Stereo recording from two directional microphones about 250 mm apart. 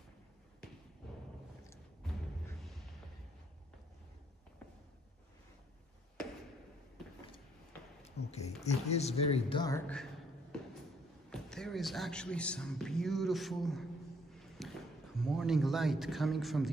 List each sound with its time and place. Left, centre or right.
8.3 s speech: left; by 10.0 s centre
11.2 s speech: centre
14.3 s a sound: centre